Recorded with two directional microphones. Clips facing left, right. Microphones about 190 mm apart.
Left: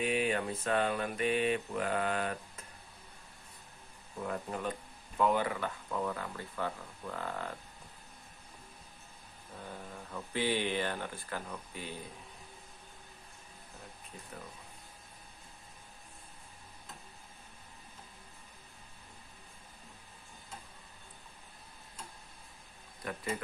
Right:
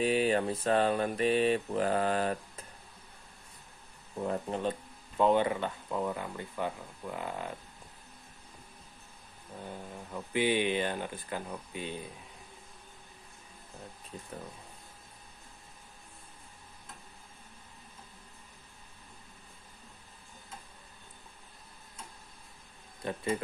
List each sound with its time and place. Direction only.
0.0 s speech: 35° right (ahead or behind)
4.2 s speech: 30° right (ahead or behind)
9.7 s speech: 15° right (ahead or behind)
23.0 s speech: 25° right (ahead or behind)